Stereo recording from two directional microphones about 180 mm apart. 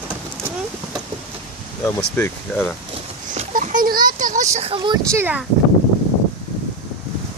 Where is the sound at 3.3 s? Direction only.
45° right (ahead or behind).